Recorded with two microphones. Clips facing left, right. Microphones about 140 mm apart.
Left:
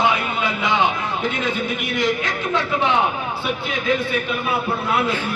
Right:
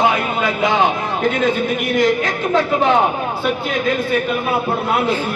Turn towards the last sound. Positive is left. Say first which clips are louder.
# right 3 dB
turn(degrees=-40)  # may be behind; listen again after turning